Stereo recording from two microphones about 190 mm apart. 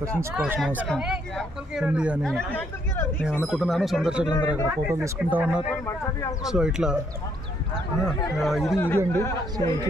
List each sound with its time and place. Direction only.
0.4 s speech: 5° right (ahead or behind)
4.3 s speech: 20° left (ahead or behind)
4.6 s speech: 15° right (ahead or behind)
8.4 s speech: centre (ahead or behind)
8.7 s speech: 10° left (ahead or behind)